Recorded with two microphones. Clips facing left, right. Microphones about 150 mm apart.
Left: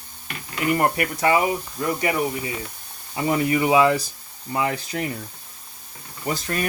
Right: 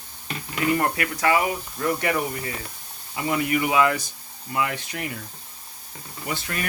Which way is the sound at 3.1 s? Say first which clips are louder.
Left 3 dB; 30° left (ahead or behind).